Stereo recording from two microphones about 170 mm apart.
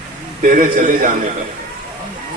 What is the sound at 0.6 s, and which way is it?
Speech, 50° right (ahead or behind).